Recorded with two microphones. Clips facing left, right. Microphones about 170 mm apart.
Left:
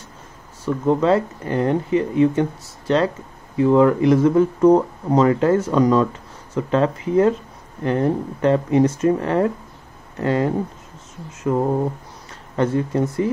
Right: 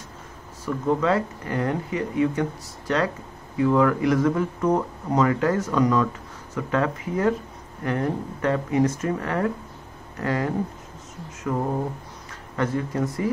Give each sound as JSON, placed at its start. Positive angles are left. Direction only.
{"t": 0.8, "sound": "speech", "side_deg": 30}